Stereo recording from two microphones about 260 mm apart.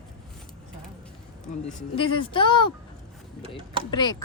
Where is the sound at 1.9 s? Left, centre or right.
Left.